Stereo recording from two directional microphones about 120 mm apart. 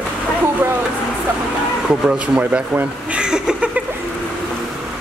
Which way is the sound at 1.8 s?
10° right (ahead or behind).